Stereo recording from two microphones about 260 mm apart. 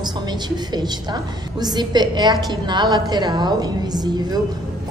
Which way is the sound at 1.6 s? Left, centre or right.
Centre.